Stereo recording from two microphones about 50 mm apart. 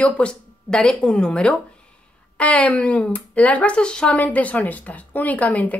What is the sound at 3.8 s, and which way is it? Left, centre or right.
Speech, centre.